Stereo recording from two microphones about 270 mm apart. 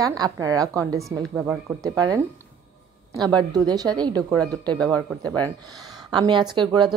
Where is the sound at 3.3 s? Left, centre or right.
Centre.